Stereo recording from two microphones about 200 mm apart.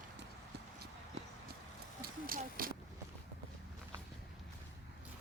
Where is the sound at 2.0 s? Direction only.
45° right (ahead or behind).